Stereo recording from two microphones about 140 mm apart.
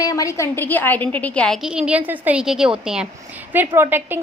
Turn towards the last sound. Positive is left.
turn(degrees=-15)  # may be behind; listen again after turning